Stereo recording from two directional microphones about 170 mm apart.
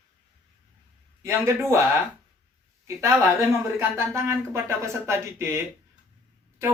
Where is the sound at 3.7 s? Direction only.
15° right (ahead or behind).